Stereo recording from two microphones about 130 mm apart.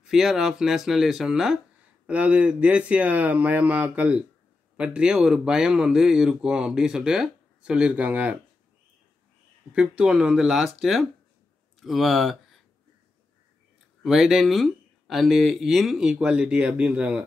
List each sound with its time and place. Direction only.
0.0 s speech: 5° right (ahead or behind)
9.8 s speech: 10° right (ahead or behind)
14.0 s speech: centre (ahead or behind)